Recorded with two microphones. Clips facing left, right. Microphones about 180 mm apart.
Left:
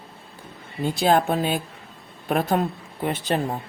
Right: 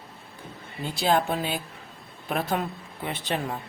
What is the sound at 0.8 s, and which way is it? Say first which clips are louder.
A man's voice: left 4 dB; 50° left (ahead or behind).